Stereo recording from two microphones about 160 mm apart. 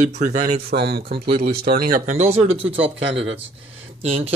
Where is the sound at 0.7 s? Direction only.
75° right (ahead or behind).